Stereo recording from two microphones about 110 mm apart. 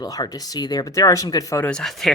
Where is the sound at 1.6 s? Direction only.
5° left (ahead or behind).